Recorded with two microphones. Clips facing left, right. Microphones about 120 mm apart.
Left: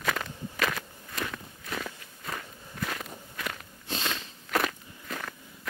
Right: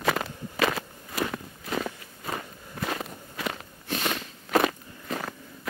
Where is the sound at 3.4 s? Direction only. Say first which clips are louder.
Right 5 dB; 25° right (ahead or behind).